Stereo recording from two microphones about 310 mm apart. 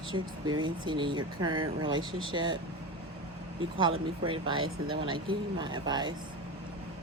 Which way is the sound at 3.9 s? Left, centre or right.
Right.